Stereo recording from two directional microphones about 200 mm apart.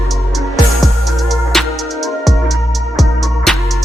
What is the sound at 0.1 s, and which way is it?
Music, centre (ahead or behind).